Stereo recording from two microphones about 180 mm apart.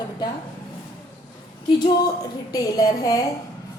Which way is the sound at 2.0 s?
20° left (ahead or behind).